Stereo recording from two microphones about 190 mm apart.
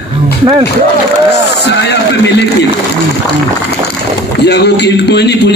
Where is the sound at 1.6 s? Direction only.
60° left (ahead or behind).